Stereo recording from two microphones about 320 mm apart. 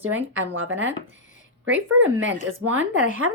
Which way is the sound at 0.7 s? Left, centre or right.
Right.